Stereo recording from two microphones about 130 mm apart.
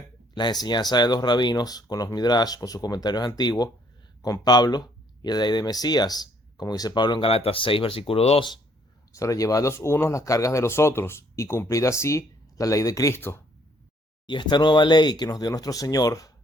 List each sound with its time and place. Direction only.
0.3 s speech: 35° left (ahead or behind); by 8.4 s 50° left (ahead or behind)
9.1 s speech: 25° left (ahead or behind)
14.3 s speech: 35° left (ahead or behind)